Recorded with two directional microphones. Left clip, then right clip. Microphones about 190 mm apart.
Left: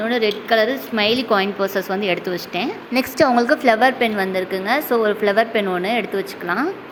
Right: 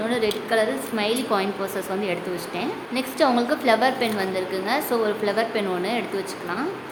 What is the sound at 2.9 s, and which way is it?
Speech, 40° left (ahead or behind).